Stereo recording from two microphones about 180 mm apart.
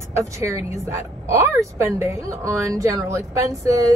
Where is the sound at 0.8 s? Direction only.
15° right (ahead or behind).